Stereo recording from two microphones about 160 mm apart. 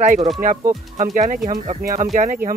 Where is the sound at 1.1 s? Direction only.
50° right (ahead or behind).